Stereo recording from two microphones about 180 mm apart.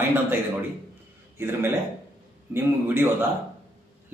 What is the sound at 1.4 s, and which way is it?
A man's voice, 10° right (ahead or behind).